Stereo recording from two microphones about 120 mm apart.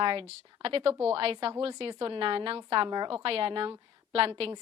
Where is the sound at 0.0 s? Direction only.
50° right (ahead or behind).